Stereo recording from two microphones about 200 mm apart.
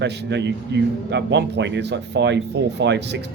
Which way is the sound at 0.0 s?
60° right (ahead or behind).